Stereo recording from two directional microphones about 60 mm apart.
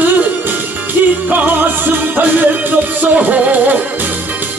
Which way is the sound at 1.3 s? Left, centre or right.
Right.